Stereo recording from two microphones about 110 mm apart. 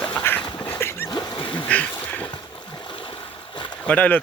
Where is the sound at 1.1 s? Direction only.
40° left (ahead or behind).